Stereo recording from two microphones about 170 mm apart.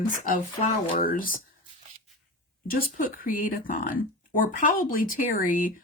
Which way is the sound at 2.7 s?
55° left (ahead or behind).